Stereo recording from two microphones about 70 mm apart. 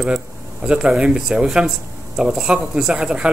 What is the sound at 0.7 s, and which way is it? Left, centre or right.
Speech, centre.